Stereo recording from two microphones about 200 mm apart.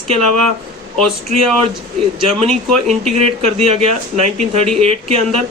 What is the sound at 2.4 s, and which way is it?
A man's voice, 35° right (ahead or behind).